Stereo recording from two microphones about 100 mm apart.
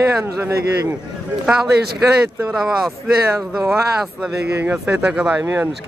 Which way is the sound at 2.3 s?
10° right (ahead or behind).